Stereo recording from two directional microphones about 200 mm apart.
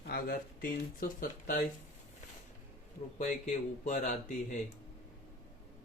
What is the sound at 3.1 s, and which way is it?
Speech, 35° left (ahead or behind).